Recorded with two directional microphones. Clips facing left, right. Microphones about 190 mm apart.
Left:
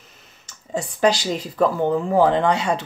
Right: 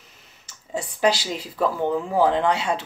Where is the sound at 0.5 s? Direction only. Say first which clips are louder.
Left 3 dB; 5° right (ahead or behind).